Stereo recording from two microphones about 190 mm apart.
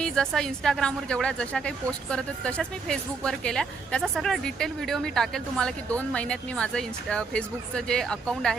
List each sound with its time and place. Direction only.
0.0 s speech: 5° left (ahead or behind)